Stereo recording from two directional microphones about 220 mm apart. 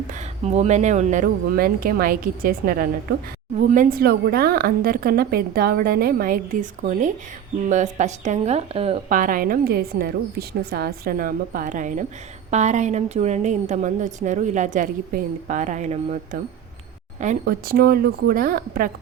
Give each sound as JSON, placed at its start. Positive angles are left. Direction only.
{"t": 0.1, "sound": "a woman's voice", "side_deg": -30}